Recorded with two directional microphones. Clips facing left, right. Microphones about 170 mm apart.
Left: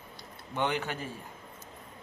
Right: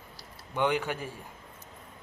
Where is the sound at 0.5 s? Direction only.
10° right (ahead or behind).